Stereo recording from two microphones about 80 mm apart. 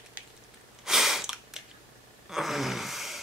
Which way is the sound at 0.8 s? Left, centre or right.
Centre.